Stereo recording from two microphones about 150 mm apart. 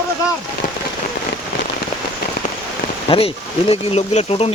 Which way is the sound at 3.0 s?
40° left (ahead or behind).